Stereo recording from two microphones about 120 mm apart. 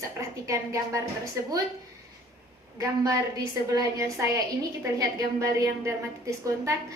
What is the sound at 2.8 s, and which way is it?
A woman's voice, 30° right (ahead or behind).